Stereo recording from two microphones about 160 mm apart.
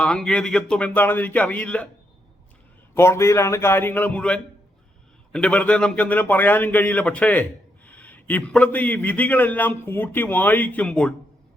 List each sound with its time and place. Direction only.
0.0 s a man's voice: 5° left (ahead or behind)
2.9 s a man's voice: 15° left (ahead or behind)